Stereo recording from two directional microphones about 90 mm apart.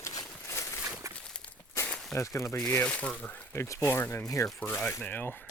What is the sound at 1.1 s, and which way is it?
Walk, 10° left (ahead or behind).